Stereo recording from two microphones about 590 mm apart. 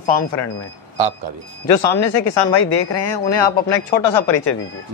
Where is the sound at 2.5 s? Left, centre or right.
Left.